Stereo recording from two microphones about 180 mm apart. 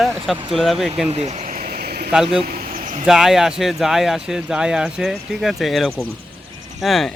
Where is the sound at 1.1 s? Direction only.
35° right (ahead or behind); by 2.1 s 60° right (ahead or behind).